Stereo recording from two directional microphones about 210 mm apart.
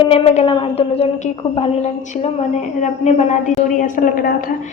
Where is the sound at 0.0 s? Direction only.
25° left (ahead or behind).